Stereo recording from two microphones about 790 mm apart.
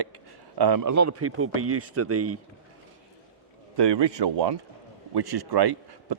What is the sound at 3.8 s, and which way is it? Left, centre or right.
A man's voice, right.